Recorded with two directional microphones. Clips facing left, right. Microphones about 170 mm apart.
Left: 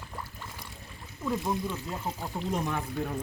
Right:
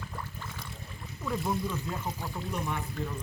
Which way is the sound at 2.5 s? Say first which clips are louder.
Left 3 dB; 90° left.